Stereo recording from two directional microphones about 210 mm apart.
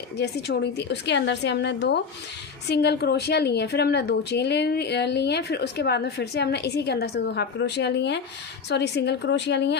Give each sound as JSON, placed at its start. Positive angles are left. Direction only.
{"t": 0.2, "sound": "a woman's voice", "side_deg": 50}